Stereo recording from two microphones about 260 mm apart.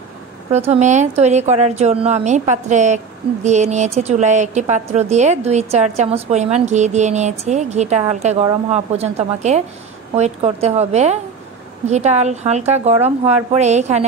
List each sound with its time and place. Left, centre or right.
0.5 s a woman's voice: right